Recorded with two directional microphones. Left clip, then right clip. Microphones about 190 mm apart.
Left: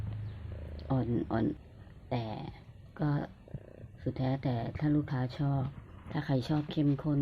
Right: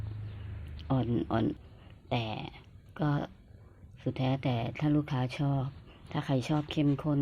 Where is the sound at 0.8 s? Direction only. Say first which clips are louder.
Right 2 dB; 10° right (ahead or behind).